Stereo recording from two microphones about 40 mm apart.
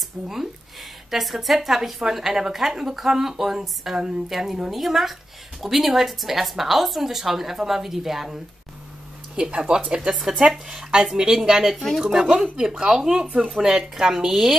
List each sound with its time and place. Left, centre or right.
1.1 s a woman's voice: centre
9.4 s speech: right
10.0 s a woman's voice: centre
11.7 s a woman's voice: centre
12.5 s a woman's voice: centre